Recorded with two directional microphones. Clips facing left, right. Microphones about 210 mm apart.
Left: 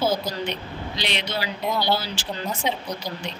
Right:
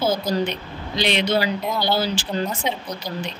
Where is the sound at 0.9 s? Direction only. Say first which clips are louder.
Right 9 dB; 50° right (ahead or behind).